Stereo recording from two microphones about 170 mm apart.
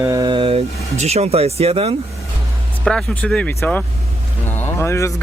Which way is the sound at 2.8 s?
5° left (ahead or behind).